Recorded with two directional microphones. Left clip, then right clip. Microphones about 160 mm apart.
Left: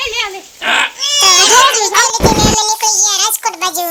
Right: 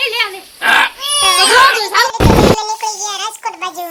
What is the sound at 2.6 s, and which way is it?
Child singing, 25° left (ahead or behind).